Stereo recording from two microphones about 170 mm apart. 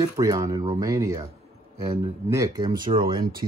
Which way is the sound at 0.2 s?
20° right (ahead or behind).